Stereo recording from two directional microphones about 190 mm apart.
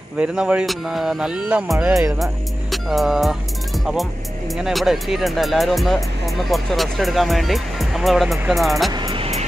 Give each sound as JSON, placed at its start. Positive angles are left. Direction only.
{"t": 0.2, "sound": "speech", "side_deg": -5}
{"t": 8.9, "sound": "music", "side_deg": -25}